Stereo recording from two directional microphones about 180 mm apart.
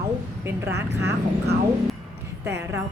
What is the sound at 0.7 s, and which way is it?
Speech, 70° right (ahead or behind).